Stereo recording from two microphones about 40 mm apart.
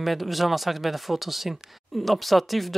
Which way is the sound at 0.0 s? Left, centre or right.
Centre.